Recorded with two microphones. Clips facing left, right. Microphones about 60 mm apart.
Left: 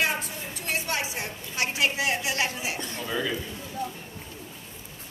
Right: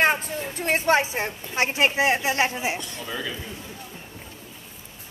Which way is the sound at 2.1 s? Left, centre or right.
Right.